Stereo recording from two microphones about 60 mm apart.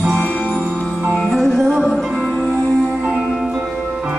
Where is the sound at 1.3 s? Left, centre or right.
Centre.